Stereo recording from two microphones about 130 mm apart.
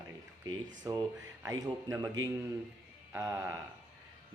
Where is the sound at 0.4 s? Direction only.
35° right (ahead or behind).